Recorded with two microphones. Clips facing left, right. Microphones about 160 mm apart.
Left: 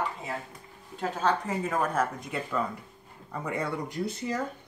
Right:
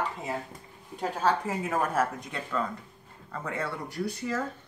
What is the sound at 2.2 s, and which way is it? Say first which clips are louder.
Speech: left 1 dB; 5° left (ahead or behind).